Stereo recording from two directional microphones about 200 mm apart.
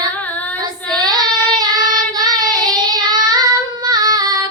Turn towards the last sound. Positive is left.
turn(degrees=-20)  # may be behind; listen again after turning